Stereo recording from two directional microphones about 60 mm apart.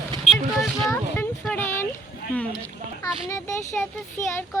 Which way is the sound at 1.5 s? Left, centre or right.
Left.